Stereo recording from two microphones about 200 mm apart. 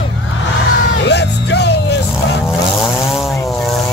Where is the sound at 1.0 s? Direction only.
60° left (ahead or behind).